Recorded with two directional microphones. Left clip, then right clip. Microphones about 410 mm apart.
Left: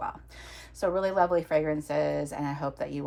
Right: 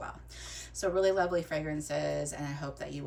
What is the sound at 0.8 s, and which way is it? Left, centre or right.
Speech, centre.